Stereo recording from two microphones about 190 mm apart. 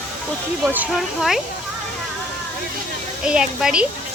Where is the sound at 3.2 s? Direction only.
5° right (ahead or behind).